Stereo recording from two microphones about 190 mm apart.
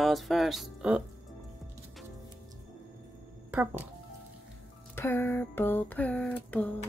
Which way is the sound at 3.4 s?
10° right (ahead or behind).